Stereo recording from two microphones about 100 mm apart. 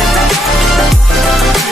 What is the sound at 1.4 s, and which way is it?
Speech, centre (ahead or behind).